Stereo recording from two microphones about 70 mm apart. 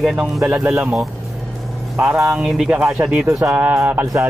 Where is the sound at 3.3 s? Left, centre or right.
Centre.